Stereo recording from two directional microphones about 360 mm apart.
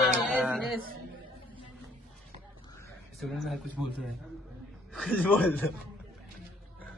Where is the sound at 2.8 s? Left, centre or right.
Centre.